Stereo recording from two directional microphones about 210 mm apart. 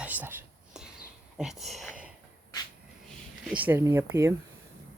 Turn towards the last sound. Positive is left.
turn(degrees=-15)  # may be behind; listen again after turning